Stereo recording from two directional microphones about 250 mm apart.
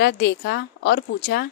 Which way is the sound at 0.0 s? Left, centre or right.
Left.